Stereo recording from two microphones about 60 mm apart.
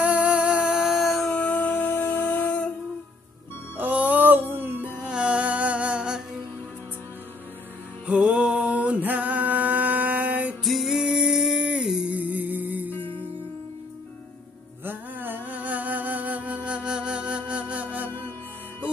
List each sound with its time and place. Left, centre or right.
0.0 s a sound: right; by 1.3 s centre
1.3 s music: left
3.7 s music: right
4.8 s music: centre
8.1 s a sound: centre
10.6 s music: centre
11.6 s humming: centre
12.1 s music: right
14.9 s music: right